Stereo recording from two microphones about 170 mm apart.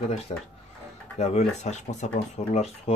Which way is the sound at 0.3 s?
30° left (ahead or behind).